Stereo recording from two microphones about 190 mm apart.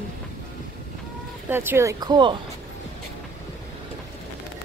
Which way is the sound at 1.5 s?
10° right (ahead or behind).